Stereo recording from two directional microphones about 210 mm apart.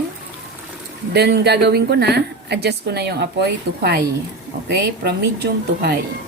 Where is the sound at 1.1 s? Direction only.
50° right (ahead or behind).